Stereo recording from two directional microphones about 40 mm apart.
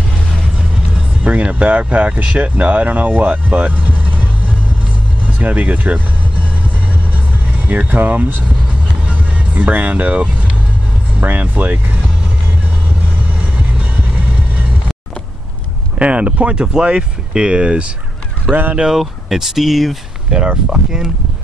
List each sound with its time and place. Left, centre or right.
1.2 s speech: right
7.5 s music: right
7.9 s speech: right
9.0 s vehicle: right
11.2 s speech: right
13.6 s vehicle: right
16.0 s speech: right
16.6 s speech: right
18.4 s speech: right
18.9 s speech: centre
20.7 s speech: centre